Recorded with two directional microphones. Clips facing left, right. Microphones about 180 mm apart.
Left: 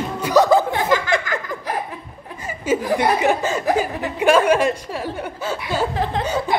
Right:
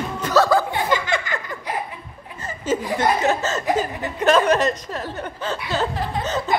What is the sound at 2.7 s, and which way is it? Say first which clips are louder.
Speech: left 2 dB; 10° left (ahead or behind).